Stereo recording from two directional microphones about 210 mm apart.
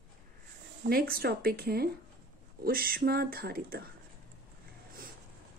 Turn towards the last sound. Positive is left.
turn(degrees=-45)  # may be behind; listen again after turning